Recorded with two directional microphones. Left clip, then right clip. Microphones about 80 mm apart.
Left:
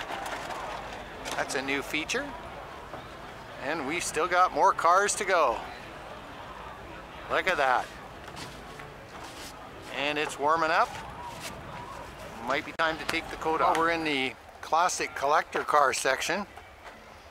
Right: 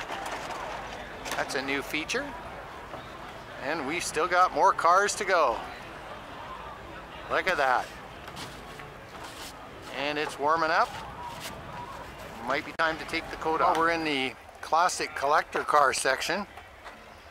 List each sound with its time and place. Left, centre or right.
0.0 s a sound: centre
1.4 s speech: centre
3.6 s speech: centre
7.2 s speech: centre
9.9 s speech: centre
12.4 s speech: centre